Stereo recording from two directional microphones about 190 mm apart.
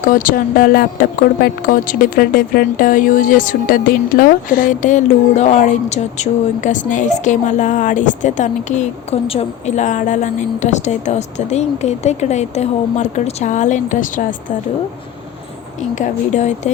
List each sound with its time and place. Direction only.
0.1 s speech: 45° left (ahead or behind)
16.0 s speech: 35° left (ahead or behind)